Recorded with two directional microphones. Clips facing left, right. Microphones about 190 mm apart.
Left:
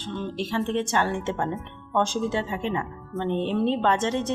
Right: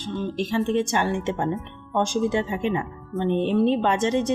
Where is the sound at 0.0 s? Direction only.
15° right (ahead or behind).